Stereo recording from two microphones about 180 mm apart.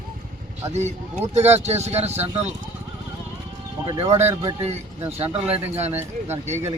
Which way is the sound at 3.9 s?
35° right (ahead or behind).